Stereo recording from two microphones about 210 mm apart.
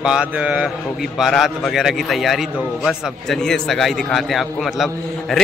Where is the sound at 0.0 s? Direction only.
5° right (ahead or behind).